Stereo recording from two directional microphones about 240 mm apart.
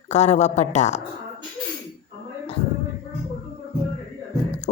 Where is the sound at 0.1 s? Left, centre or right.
Left.